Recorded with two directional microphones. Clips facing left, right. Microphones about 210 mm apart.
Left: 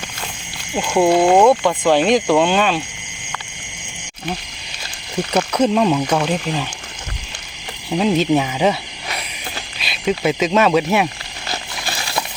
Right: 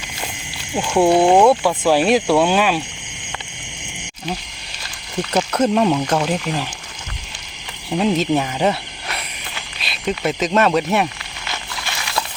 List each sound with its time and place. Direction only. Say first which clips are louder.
1.1 s speech: even; 15° right (ahead or behind)
5.4 s speech: left 1 dB; centre (ahead or behind)
7.9 s speech: left 2 dB; centre (ahead or behind)
11.4 s a sound: left 2 dB; 35° left (ahead or behind)